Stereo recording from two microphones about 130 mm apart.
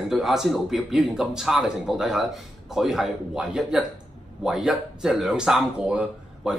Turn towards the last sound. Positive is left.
turn(degrees=-5)  # may be behind; listen again after turning